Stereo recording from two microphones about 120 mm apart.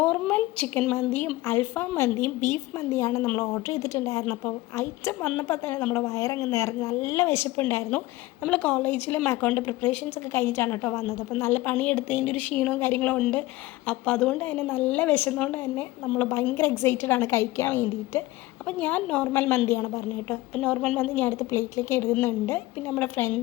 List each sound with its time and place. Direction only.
0.0 s a woman's voice: 15° left (ahead or behind)
6.1 s a woman's voice: 25° left (ahead or behind)
20.6 s a woman's voice: 5° left (ahead or behind)